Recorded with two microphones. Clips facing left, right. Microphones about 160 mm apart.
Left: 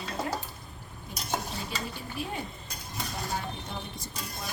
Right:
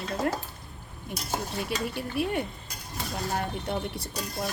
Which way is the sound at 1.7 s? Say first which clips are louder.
Right 6 dB; 70° right (ahead or behind).